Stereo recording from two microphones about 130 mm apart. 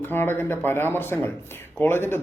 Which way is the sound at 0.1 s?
15° left (ahead or behind).